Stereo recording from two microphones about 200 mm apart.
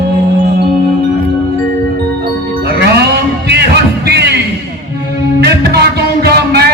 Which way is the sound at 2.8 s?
55° right (ahead or behind).